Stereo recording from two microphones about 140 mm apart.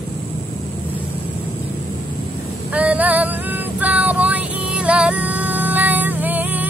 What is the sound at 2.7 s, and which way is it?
Female singing, 10° right (ahead or behind).